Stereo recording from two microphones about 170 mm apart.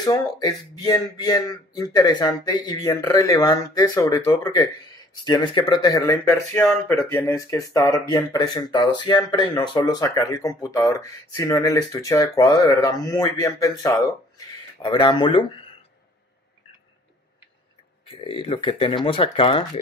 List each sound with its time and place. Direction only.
0.0 s speech: 20° left (ahead or behind)
18.0 s speech: 30° left (ahead or behind)